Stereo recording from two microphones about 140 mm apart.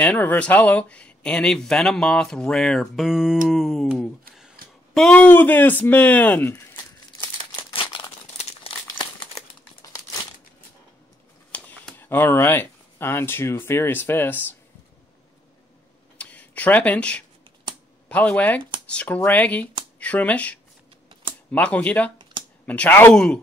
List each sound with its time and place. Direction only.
0.0 s speech: 15° left (ahead or behind)
6.5 s crumpling: 15° left (ahead or behind)
7.7 s crumpling: 40° left (ahead or behind)
11.5 s speech: 10° left (ahead or behind)
16.2 s a sound: 10° left (ahead or behind)
18.0 s speech: 10° left (ahead or behind)
21.1 s typing: 35° right (ahead or behind)
21.5 s speech: 10° left (ahead or behind)